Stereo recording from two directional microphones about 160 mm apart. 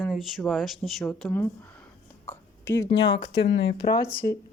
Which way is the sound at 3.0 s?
90° left.